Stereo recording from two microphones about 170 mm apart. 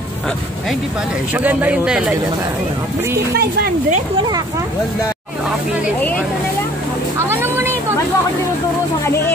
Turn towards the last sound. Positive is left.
turn(degrees=-15)  # may be behind; listen again after turning